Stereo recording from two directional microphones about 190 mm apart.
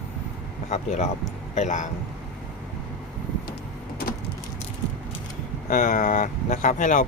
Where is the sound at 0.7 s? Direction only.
35° left (ahead or behind).